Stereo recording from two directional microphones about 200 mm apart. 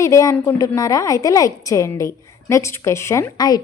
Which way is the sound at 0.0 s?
15° left (ahead or behind).